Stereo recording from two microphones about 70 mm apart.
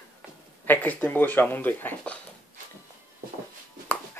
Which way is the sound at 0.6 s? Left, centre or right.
Left.